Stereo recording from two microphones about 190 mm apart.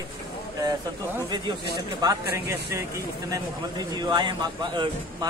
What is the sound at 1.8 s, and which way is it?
Speech, 20° right (ahead or behind).